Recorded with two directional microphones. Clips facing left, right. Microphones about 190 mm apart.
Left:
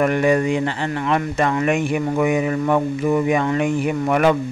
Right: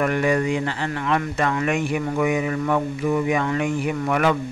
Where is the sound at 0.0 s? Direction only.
25° left (ahead or behind).